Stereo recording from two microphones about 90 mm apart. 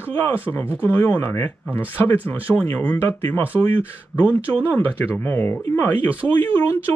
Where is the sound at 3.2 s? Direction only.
30° left (ahead or behind).